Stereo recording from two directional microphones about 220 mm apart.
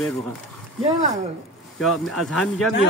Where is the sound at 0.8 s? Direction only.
30° right (ahead or behind).